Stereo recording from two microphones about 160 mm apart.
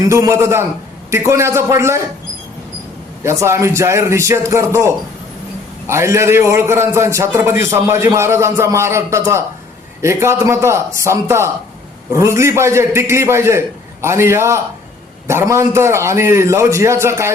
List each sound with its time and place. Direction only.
0.1 s a man's voice: 20° right (ahead or behind)
3.2 s a man's voice: 15° right (ahead or behind)
5.9 s a man's voice: 15° right (ahead or behind)